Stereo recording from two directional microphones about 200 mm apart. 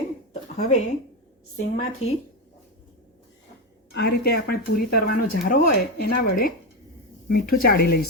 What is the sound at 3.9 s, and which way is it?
Speech, 50° left (ahead or behind).